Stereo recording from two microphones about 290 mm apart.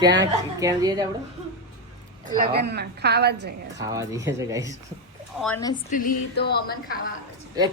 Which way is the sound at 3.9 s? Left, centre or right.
Centre.